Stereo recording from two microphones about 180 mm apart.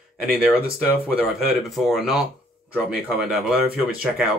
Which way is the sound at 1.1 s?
5° right (ahead or behind).